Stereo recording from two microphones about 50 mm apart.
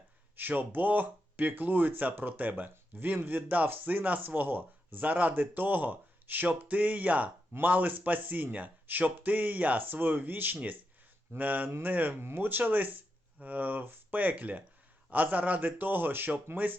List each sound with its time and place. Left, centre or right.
0.3 s speech: right